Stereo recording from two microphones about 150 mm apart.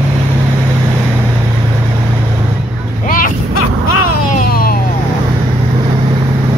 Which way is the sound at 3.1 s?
65° left (ahead or behind).